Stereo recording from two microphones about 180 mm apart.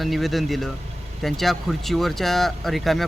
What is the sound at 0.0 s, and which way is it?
Speech, centre (ahead or behind).